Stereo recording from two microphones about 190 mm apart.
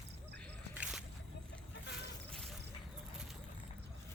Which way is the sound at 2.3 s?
5° left (ahead or behind).